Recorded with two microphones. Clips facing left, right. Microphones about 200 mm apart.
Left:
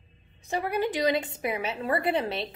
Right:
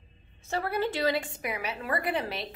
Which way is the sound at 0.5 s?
15° left (ahead or behind).